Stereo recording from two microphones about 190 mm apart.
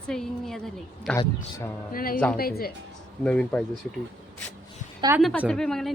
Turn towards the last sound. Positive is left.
turn(degrees=0)  # may be behind; listen again after turning